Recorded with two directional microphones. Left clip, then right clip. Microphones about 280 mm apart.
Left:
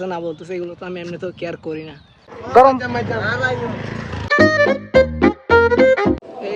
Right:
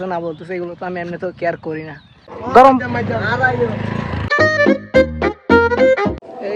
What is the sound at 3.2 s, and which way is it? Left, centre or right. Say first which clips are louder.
Speech: right 6 dB; right.